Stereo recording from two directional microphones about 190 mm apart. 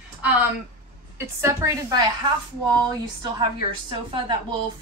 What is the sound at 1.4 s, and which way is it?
Speech, 15° right (ahead or behind).